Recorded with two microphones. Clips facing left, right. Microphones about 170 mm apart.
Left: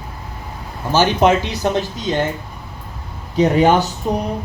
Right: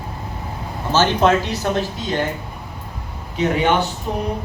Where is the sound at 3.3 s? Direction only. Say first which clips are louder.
Left 4 dB; 40° left (ahead or behind).